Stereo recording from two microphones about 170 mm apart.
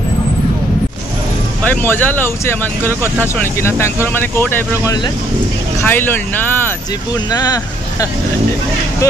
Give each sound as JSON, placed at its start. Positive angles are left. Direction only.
{"t": 1.6, "sound": "speech", "side_deg": 10}
{"t": 7.2, "sound": "speech", "side_deg": 20}